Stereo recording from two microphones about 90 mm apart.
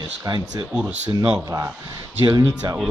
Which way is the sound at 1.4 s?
35° right (ahead or behind).